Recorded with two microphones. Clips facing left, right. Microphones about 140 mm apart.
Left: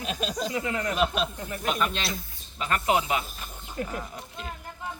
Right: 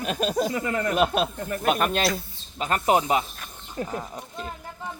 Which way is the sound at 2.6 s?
35° right (ahead or behind).